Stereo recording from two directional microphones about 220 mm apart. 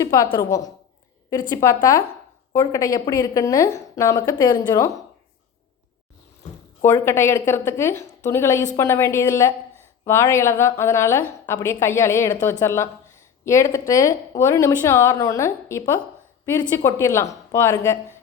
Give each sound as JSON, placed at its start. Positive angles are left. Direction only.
{"t": 0.0, "sound": "speech", "side_deg": 15}
{"t": 6.8, "sound": "speech", "side_deg": 10}